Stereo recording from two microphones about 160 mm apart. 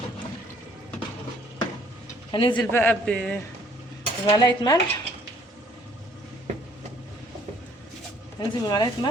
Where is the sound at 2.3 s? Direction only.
30° left (ahead or behind).